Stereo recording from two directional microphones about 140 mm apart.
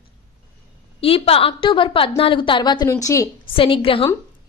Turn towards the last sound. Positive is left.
turn(degrees=40)  # may be behind; listen again after turning